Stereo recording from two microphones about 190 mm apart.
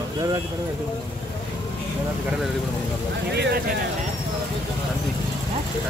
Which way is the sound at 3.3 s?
60° right (ahead or behind).